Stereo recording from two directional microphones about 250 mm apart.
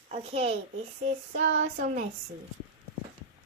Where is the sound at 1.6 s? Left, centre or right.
Right.